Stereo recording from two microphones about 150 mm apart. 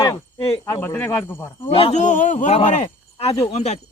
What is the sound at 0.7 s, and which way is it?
Speech, 15° left (ahead or behind).